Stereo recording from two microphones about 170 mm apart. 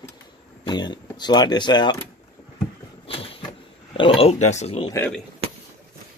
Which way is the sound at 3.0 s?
35° left (ahead or behind).